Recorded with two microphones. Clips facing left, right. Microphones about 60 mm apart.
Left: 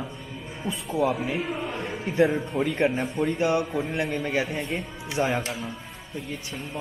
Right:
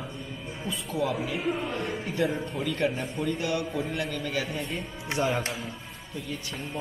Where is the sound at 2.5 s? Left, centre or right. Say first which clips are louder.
Left 5 dB; left.